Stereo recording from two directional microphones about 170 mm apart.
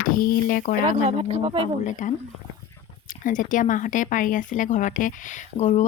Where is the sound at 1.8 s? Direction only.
45° left (ahead or behind).